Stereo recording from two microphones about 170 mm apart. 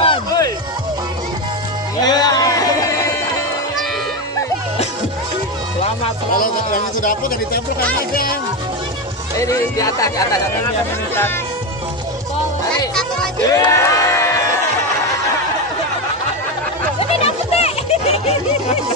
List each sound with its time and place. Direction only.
0.0 s music: 30° left (ahead or behind)
2.0 s music: 25° left (ahead or behind)
5.8 s music: 35° left (ahead or behind)
6.3 s speech: 55° left (ahead or behind)
9.4 s speech: 20° left (ahead or behind)
13.5 s a sound: 20° left (ahead or behind)
17.2 s a sound: 35° left (ahead or behind)